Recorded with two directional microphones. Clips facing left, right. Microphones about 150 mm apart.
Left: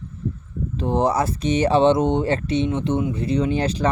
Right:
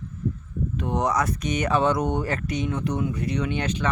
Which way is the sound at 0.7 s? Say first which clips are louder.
Left 5 dB; 30° left (ahead or behind).